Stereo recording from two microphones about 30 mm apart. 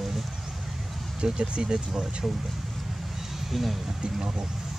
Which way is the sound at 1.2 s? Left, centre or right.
Right.